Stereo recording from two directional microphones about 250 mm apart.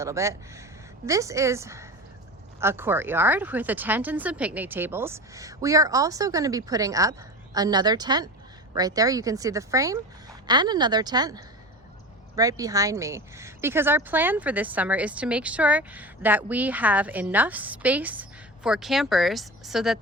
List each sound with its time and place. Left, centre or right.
0.0 s a woman's voice: centre